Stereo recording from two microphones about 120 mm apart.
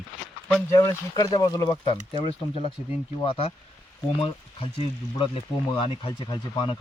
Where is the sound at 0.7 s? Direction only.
25° left (ahead or behind).